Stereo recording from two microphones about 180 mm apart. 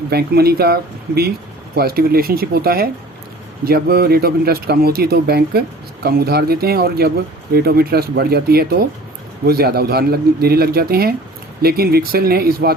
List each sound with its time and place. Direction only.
0.1 s speech: 60° right (ahead or behind)